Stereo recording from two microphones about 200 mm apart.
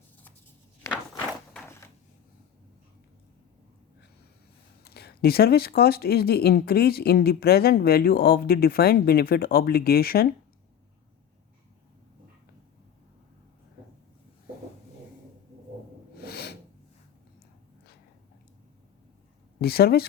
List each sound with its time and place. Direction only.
4.8 s speech: 50° left (ahead or behind)
16.1 s snort: 55° left (ahead or behind)
19.5 s speech: 50° left (ahead or behind)